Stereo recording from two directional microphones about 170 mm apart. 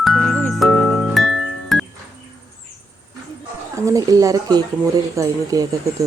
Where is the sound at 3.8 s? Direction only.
20° right (ahead or behind).